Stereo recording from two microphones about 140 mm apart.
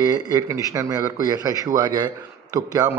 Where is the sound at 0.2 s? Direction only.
25° right (ahead or behind).